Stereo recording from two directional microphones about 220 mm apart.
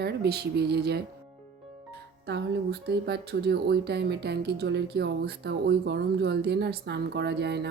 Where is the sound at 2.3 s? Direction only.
50° right (ahead or behind).